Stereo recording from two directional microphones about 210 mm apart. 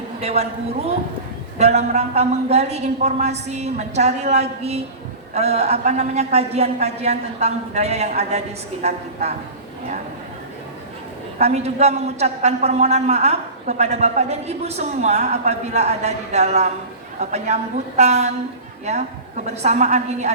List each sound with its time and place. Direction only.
0.2 s a man's voice: 30° right (ahead or behind)
11.3 s a man's voice: 30° right (ahead or behind)